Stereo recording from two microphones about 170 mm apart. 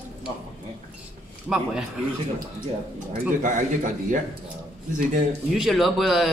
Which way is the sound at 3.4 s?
50° right (ahead or behind).